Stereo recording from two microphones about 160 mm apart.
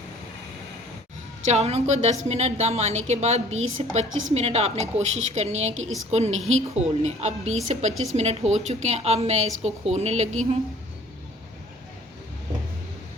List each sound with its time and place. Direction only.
1.5 s a woman's voice: 40° right (ahead or behind)